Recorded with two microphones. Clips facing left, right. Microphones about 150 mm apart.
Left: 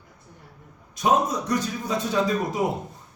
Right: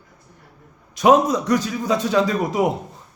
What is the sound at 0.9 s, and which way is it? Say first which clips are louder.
Speech: right 7 dB; 90° right.